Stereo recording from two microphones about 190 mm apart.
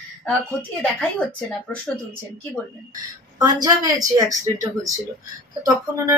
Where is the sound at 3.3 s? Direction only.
20° right (ahead or behind).